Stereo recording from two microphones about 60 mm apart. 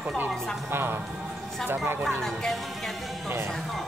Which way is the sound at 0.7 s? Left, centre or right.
Right.